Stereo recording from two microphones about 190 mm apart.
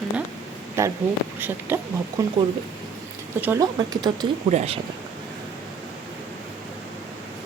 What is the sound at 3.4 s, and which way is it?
Speech, 15° right (ahead or behind).